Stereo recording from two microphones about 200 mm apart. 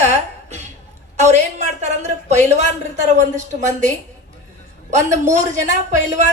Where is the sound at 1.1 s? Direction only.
35° right (ahead or behind).